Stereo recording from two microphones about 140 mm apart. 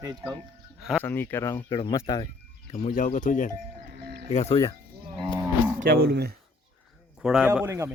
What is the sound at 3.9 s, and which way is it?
Music, 90° right.